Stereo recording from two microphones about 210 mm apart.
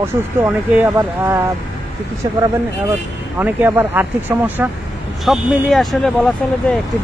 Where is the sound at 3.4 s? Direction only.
10° right (ahead or behind).